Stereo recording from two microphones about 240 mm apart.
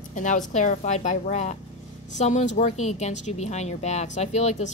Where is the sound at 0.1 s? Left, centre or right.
Left.